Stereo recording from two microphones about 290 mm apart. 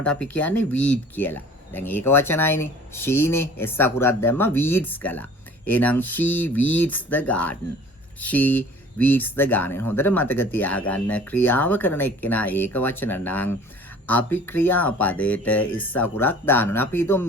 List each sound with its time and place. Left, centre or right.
0.0 s speech: centre